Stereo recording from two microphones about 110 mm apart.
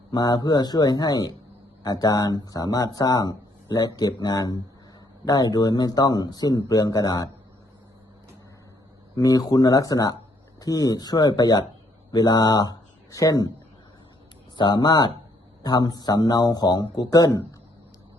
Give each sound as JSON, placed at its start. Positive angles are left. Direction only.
{"t": 0.1, "sound": "speech", "side_deg": 35}
{"t": 9.1, "sound": "speech", "side_deg": 35}
{"t": 14.5, "sound": "speech", "side_deg": 40}